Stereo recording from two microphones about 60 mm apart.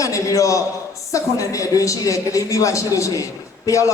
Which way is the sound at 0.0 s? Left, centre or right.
Left.